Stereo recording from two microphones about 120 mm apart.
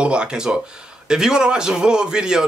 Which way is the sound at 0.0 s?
10° right (ahead or behind).